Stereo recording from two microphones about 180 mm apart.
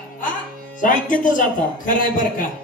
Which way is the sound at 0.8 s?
45° left (ahead or behind).